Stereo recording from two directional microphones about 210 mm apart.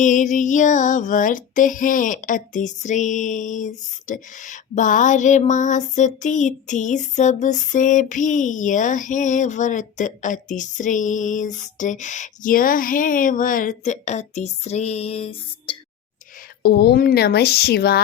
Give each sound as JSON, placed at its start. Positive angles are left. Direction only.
{"t": 0.0, "sound": "female singing", "side_deg": 35}
{"t": 16.6, "sound": "speech", "side_deg": 50}